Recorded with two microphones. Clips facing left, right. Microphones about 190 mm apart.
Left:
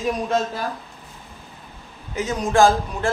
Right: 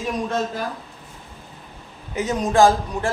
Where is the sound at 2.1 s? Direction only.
15° right (ahead or behind).